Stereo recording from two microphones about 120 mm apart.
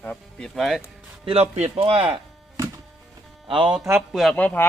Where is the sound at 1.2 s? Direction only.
60° right (ahead or behind).